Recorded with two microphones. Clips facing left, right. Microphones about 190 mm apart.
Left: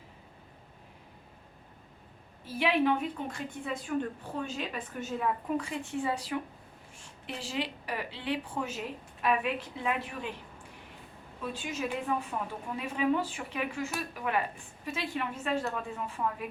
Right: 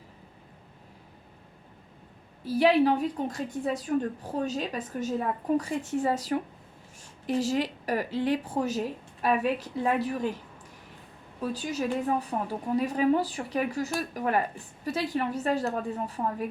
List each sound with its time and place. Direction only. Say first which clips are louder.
2.4 s a woman's voice: right 6 dB; 40° right (ahead or behind)
11.3 s a woman's voice: right 5 dB; 40° right (ahead or behind)